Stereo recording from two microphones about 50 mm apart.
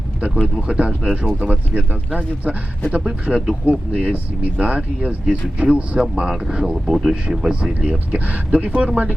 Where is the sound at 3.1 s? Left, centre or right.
Centre.